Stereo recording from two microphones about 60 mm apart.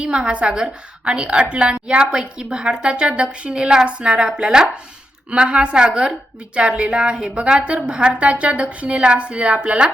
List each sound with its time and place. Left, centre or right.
0.0 s a woman's voice: centre